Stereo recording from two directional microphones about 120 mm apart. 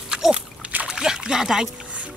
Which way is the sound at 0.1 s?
5° right (ahead or behind).